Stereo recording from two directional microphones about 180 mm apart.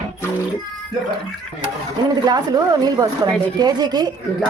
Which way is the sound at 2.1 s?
20° right (ahead or behind).